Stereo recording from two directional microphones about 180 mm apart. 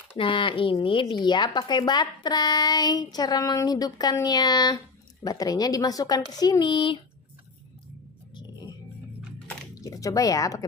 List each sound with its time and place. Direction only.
0.2 s speech: 30° left (ahead or behind)
8.4 s music: 25° left (ahead or behind)
9.5 s a sound: 20° left (ahead or behind)